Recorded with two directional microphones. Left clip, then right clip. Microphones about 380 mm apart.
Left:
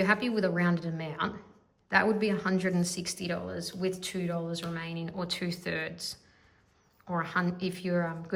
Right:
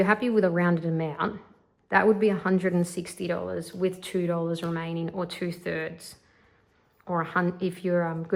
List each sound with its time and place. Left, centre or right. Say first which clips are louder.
0.0 s a woman's voice: right 5 dB; centre